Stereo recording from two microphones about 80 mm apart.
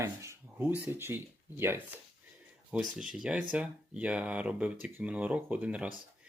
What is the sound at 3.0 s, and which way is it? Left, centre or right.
Speech, centre.